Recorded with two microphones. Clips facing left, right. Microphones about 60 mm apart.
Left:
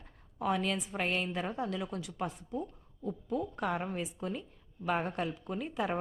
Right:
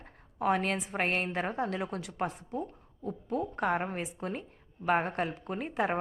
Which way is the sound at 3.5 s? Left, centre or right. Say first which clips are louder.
Right 4 dB; right.